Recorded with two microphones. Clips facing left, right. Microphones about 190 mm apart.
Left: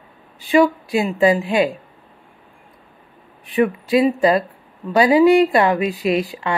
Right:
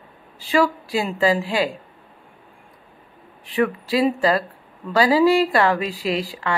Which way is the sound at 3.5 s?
20° left (ahead or behind).